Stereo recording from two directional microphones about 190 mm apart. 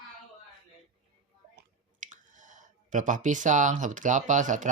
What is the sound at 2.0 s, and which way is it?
Speech, 40° right (ahead or behind).